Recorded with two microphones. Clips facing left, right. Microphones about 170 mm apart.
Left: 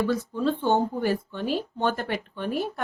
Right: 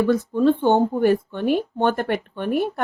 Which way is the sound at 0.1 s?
55° right (ahead or behind).